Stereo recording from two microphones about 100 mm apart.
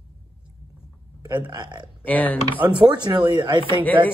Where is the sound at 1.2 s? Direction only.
45° right (ahead or behind).